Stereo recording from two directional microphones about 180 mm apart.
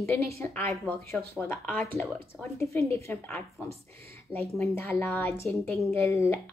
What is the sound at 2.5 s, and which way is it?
Speech, 15° left (ahead or behind).